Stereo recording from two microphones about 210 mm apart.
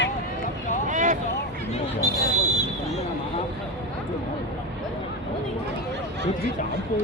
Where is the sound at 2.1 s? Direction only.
15° left (ahead or behind).